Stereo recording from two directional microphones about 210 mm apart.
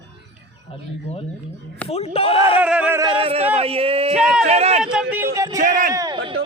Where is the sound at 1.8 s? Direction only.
30° left (ahead or behind).